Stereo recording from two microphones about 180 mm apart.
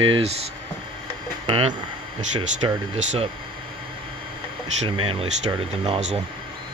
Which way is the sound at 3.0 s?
40° right (ahead or behind).